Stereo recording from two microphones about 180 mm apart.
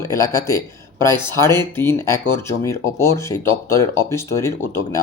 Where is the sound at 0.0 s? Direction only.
15° left (ahead or behind).